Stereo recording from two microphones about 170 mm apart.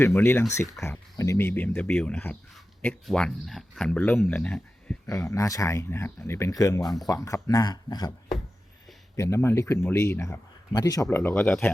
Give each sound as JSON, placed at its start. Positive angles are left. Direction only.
{"t": 0.0, "sound": "a man's voice", "side_deg": 15}
{"t": 5.0, "sound": "a man's voice", "side_deg": 20}
{"t": 9.1, "sound": "a man's voice", "side_deg": 15}
{"t": 11.2, "sound": "a man's voice", "side_deg": 10}